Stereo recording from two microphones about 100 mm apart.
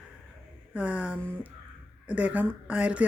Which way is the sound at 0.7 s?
10° right (ahead or behind).